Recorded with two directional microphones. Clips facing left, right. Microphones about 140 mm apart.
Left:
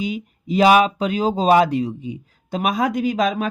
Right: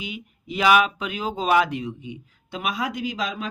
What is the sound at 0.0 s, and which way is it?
Speech, 40° left (ahead or behind).